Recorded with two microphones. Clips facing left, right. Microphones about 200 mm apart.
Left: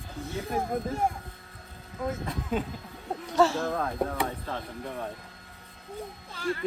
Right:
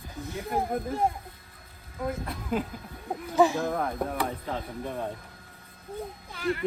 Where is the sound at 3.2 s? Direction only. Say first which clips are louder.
Right 1 dB; 15° right (ahead or behind).